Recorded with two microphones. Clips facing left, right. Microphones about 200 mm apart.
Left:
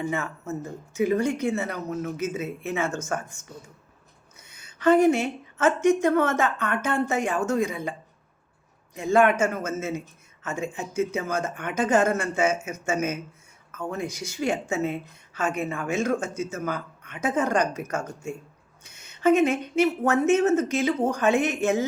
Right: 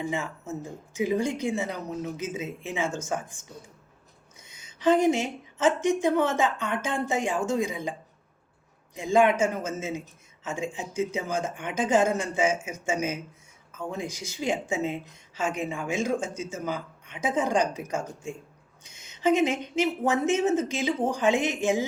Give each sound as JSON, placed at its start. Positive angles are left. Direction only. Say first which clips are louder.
{"t": 0.4, "sound": "speech", "louder": "left 3 dB", "side_deg": -15}
{"t": 4.4, "sound": "a sound", "louder": "left 2 dB", "side_deg": -15}
{"t": 5.6, "sound": "speech", "louder": "left 3 dB", "side_deg": -15}
{"t": 9.0, "sound": "speech", "louder": "left 1 dB", "side_deg": -15}
{"t": 19.2, "sound": "speech", "louder": "left 3 dB", "side_deg": 55}
{"t": 19.8, "sound": "speech", "louder": "left 3 dB", "side_deg": -15}